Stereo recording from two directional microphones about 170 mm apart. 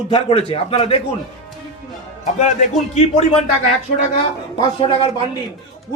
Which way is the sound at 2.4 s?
45° left (ahead or behind).